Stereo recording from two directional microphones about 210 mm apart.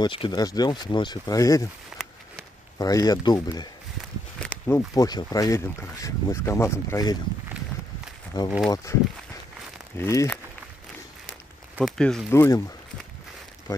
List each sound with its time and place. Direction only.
0.0 s speech: 20° left (ahead or behind)
1.9 s a sound: centre (ahead or behind)
2.8 s speech: 15° left (ahead or behind)
8.6 s speech: 15° left (ahead or behind)
9.9 s speech: 10° left (ahead or behind)
11.7 s speech: centre (ahead or behind)